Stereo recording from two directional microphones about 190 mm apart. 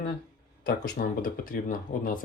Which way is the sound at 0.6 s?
50° left (ahead or behind).